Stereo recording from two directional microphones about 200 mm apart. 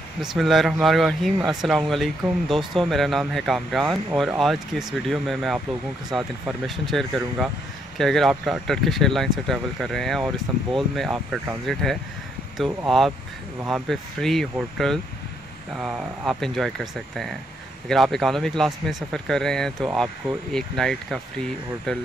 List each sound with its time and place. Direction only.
0.2 s speech: centre (ahead or behind)